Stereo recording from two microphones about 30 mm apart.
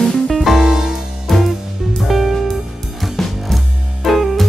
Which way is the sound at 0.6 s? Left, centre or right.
Centre.